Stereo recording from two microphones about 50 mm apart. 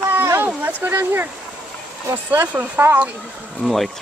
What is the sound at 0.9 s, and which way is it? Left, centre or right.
Speech, right.